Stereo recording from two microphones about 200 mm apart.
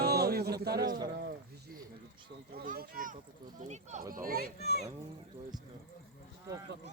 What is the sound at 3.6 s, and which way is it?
Speech, 35° right (ahead or behind).